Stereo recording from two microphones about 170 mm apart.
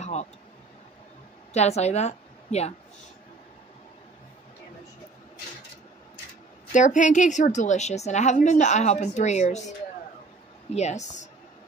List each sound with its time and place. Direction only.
0.0 s a sound: 40° left (ahead or behind)
1.5 s a woman's voice: 40° left (ahead or behind)
6.7 s a woman's voice: 45° left (ahead or behind)
10.7 s a woman's voice: 40° left (ahead or behind)